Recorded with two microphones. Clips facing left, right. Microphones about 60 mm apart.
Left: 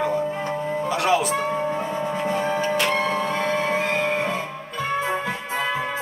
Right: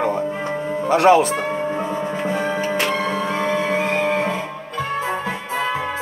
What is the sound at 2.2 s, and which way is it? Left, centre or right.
Music, centre.